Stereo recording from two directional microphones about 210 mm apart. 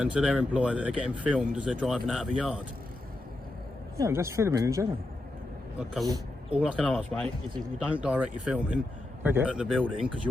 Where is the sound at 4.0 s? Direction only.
15° right (ahead or behind).